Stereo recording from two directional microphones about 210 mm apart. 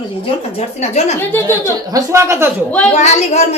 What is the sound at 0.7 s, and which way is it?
Speech, 30° left (ahead or behind).